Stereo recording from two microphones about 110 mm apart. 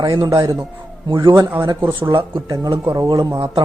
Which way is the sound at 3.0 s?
30° right (ahead or behind).